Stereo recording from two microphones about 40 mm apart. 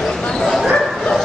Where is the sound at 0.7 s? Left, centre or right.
Centre.